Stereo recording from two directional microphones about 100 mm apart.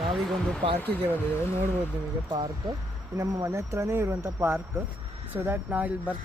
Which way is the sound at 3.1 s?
30° right (ahead or behind).